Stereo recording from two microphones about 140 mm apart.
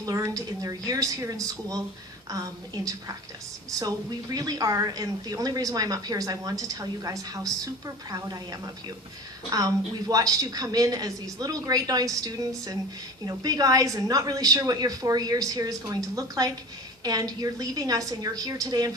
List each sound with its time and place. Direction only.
0.0 s a woman's voice: 25° right (ahead or behind)